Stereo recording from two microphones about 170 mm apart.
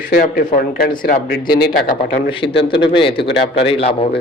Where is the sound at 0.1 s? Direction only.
60° left (ahead or behind).